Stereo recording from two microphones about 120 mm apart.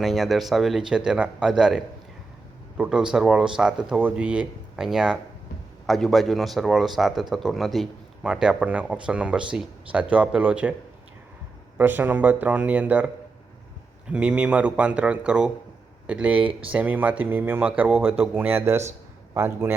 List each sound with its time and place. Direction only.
0.0 s speech: centre (ahead or behind)
11.8 s speech: 15° right (ahead or behind)
14.1 s speech: 10° right (ahead or behind)
16.4 s speech: 45° right (ahead or behind)
16.7 s a man's voice: 15° right (ahead or behind)